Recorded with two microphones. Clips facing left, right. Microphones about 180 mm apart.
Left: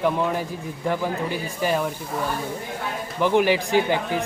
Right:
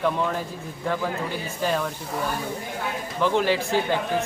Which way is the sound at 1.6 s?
10° left (ahead or behind).